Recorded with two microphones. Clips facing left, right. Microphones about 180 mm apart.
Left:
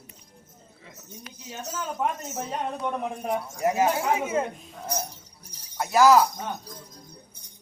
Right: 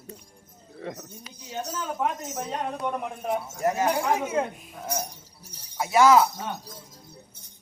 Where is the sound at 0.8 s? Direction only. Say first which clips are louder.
Right 15 dB; 65° right (ahead or behind).